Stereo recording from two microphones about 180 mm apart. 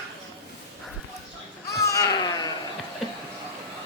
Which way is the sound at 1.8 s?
20° left (ahead or behind).